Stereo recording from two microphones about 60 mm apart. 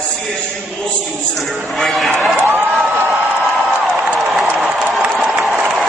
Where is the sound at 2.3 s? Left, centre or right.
Right.